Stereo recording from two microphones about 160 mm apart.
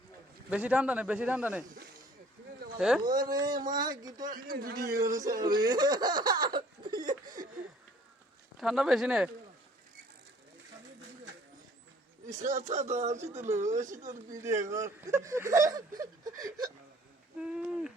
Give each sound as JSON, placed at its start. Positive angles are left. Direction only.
{"t": 0.5, "sound": "a man's voice", "side_deg": -5}
{"t": 2.7, "sound": "a man's voice", "side_deg": -5}
{"t": 3.0, "sound": "speech", "side_deg": -25}
{"t": 4.4, "sound": "a man's voice", "side_deg": -65}
{"t": 4.9, "sound": "speech", "side_deg": -20}
{"t": 7.0, "sound": "laughter", "side_deg": -60}
{"t": 8.5, "sound": "speech", "side_deg": 0}
{"t": 12.3, "sound": "speech", "side_deg": -50}
{"t": 14.7, "sound": "speech", "side_deg": -20}
{"t": 17.3, "sound": "owl", "side_deg": -5}